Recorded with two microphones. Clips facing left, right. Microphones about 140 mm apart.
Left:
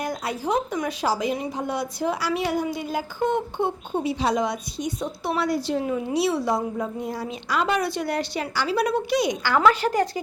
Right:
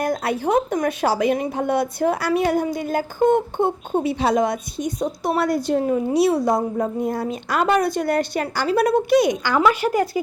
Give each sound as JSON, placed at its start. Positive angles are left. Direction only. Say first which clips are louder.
{"t": 0.0, "sound": "speech", "louder": "right 6 dB", "side_deg": -55}
{"t": 9.4, "sound": "speech", "louder": "right 1 dB", "side_deg": -15}